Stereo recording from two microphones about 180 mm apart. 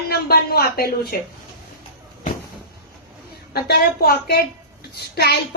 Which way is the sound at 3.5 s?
60° left (ahead or behind).